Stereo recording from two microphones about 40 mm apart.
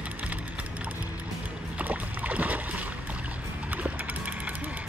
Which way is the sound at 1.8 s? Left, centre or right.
Right.